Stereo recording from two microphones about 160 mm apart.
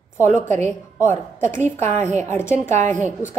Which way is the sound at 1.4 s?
50° right (ahead or behind).